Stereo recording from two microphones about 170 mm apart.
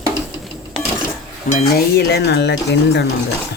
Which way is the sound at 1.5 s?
65° left (ahead or behind).